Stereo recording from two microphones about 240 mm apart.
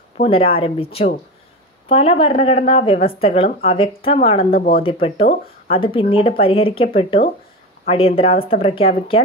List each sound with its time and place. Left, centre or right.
0.3 s speech: left
4.5 s speech: left
5.0 s speech: left